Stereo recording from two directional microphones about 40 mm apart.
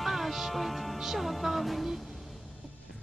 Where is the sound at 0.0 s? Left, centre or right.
Centre.